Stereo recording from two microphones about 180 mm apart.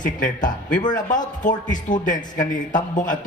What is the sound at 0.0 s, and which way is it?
A man's voice, 45° left (ahead or behind).